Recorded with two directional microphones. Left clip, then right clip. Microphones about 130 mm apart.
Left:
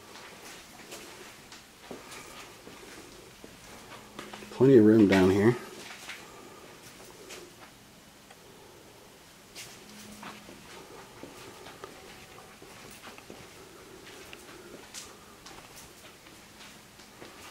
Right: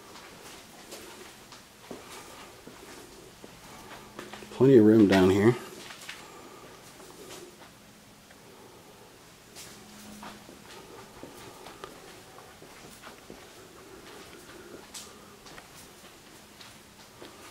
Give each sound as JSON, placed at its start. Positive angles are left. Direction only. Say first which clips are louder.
{"t": 4.5, "sound": "speech", "louder": "right 1 dB", "side_deg": 0}